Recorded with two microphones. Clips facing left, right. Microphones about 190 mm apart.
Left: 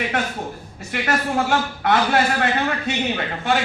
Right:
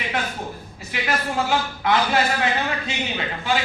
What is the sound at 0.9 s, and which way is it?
A man's voice, 55° left (ahead or behind).